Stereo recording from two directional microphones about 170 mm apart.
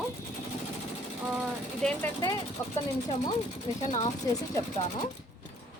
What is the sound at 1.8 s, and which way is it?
Speech, 15° left (ahead or behind).